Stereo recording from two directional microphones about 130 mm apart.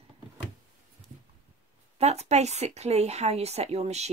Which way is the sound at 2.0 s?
55° right (ahead or behind).